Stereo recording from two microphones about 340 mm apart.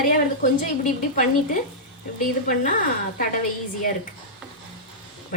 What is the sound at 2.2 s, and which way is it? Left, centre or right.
Speech, left.